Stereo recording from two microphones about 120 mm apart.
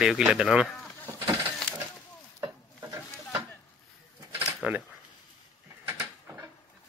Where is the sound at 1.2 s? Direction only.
30° right (ahead or behind).